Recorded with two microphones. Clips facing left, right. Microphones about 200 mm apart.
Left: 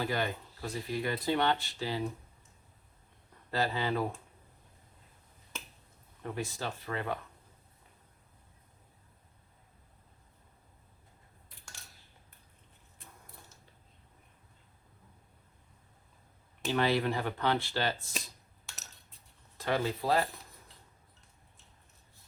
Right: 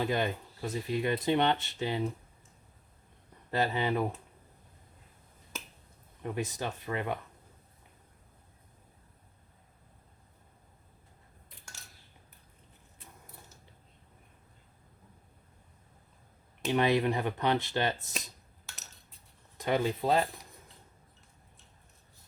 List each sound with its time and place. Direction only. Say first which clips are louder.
0.0 s speech: right 3 dB; 20° right (ahead or behind)
3.5 s speech: right 2 dB; 20° right (ahead or behind)
6.2 s speech: right 2 dB; 20° right (ahead or behind)
16.6 s speech: right 2 dB; 20° right (ahead or behind)
18.7 s coin: even; centre (ahead or behind)
19.5 s speech: right 2 dB; 15° right (ahead or behind)